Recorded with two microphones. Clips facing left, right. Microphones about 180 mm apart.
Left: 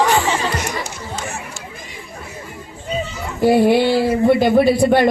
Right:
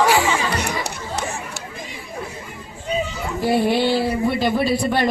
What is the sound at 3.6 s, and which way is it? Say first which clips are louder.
Speech: left 4 dB; 55° left (ahead or behind).